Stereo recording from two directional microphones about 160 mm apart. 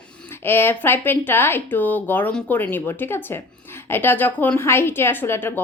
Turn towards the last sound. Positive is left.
turn(degrees=15)  # may be behind; listen again after turning